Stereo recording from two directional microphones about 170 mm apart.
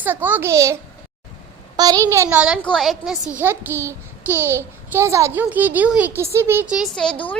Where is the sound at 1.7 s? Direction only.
20° right (ahead or behind); by 3.1 s centre (ahead or behind).